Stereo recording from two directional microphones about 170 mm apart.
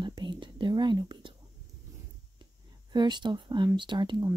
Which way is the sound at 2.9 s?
25° right (ahead or behind).